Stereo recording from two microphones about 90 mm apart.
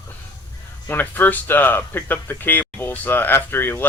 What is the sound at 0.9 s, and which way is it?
Speech, 20° left (ahead or behind).